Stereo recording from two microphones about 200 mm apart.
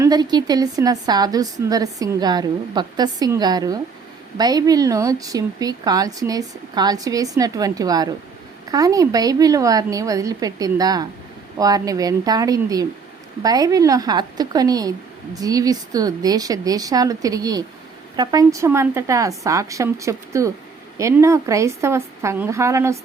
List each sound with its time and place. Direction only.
0.0 s a woman's voice: 20° right (ahead or behind)